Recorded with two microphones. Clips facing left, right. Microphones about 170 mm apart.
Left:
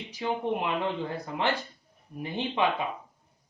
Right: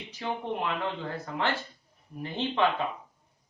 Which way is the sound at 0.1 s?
15° left (ahead or behind).